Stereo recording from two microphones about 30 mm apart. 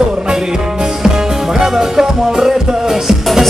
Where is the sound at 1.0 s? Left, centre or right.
Right.